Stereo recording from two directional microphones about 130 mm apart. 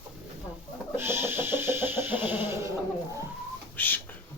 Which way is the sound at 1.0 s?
20° right (ahead or behind).